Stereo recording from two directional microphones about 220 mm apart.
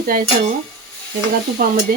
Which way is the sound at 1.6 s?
40° right (ahead or behind).